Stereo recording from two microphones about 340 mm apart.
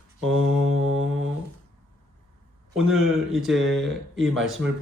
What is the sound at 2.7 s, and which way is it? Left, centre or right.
Speech, centre.